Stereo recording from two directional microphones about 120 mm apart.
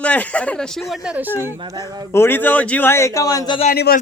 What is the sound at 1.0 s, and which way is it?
Speech, 15° right (ahead or behind).